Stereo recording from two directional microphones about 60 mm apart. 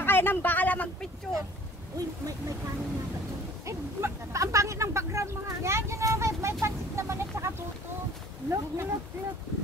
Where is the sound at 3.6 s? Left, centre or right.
Right.